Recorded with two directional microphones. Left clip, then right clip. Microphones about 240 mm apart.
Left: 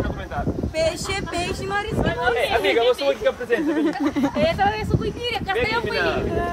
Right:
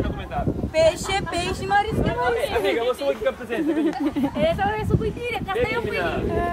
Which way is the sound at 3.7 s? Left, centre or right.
Centre.